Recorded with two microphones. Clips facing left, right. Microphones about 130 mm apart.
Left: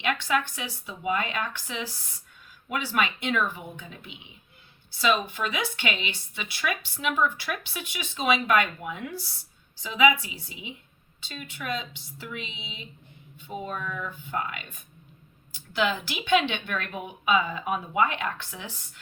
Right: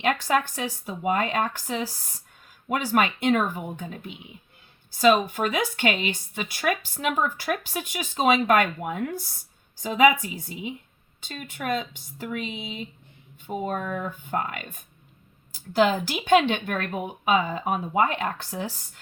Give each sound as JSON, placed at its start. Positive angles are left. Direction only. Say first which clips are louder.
{"t": 0.0, "sound": "speech", "louder": "right 3 dB", "side_deg": -40}